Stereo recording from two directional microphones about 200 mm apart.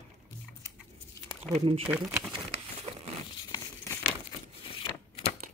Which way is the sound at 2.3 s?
30° right (ahead or behind).